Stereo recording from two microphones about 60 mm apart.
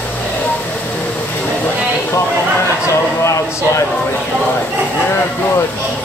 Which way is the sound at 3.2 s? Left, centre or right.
Left.